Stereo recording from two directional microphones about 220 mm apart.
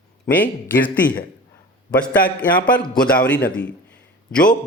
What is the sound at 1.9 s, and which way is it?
A man's voice, 5° left (ahead or behind).